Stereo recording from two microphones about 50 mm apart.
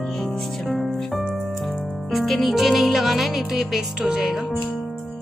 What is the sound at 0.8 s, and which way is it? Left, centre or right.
Music, centre.